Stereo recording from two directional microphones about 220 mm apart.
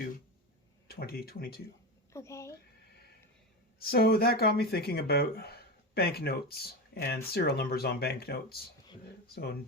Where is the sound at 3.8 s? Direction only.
45° left (ahead or behind).